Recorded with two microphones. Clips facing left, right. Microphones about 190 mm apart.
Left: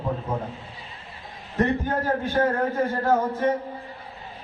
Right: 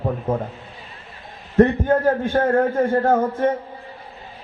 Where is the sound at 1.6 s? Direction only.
50° right (ahead or behind).